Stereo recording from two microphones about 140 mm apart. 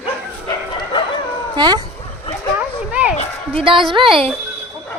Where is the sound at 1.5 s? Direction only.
30° right (ahead or behind).